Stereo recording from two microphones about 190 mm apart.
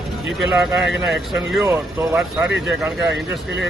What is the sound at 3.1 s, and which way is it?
Speech, 65° right (ahead or behind).